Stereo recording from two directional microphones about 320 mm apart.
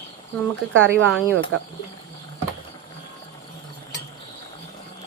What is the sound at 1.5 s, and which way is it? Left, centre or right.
Speech, right.